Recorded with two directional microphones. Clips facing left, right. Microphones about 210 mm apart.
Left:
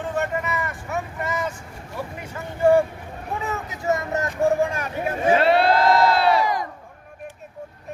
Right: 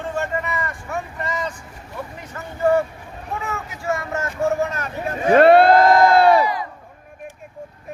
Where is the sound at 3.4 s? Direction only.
20° left (ahead or behind).